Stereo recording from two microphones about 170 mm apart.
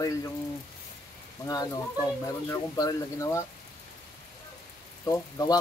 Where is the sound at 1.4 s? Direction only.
20° left (ahead or behind).